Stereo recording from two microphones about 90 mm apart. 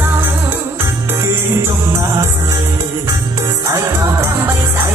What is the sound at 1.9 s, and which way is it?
Music, 40° right (ahead or behind).